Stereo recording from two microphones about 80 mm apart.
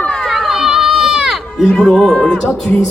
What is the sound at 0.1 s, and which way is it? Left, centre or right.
Run, centre.